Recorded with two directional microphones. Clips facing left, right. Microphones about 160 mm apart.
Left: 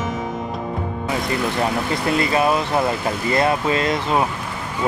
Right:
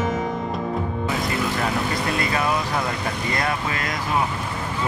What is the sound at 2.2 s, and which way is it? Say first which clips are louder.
Speech: left 7 dB; 25° left (ahead or behind).